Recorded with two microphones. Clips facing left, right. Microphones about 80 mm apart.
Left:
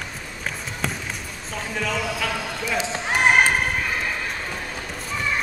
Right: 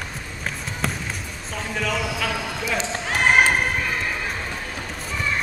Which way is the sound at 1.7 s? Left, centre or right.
Centre.